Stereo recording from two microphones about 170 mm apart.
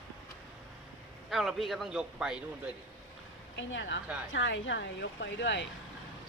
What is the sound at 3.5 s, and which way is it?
Speech, 90° left.